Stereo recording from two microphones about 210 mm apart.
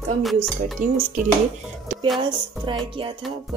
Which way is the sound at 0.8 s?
45° right (ahead or behind).